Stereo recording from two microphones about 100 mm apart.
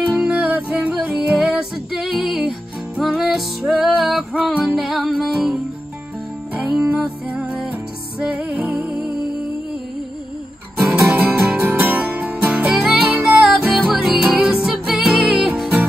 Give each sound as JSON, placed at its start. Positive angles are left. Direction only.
{"t": 0.1, "sound": "music", "side_deg": -10}
{"t": 6.9, "sound": "music", "side_deg": -15}
{"t": 11.2, "sound": "music", "side_deg": 0}
{"t": 11.6, "sound": "music", "side_deg": -20}
{"t": 12.8, "sound": "music", "side_deg": 0}